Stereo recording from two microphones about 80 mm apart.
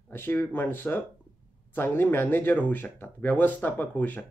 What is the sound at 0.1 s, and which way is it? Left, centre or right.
Speech, left.